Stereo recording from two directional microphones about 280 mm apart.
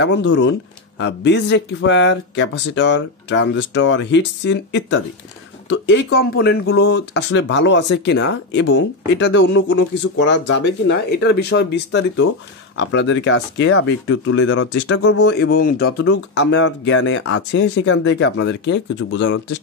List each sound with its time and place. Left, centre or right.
0.0 s speech: left
15.2 s speech: left